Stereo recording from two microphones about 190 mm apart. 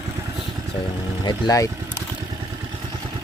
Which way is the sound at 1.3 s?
20° left (ahead or behind).